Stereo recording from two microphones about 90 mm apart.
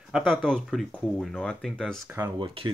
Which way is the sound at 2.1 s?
25° right (ahead or behind).